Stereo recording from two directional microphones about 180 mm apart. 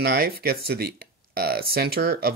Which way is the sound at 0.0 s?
60° right (ahead or behind).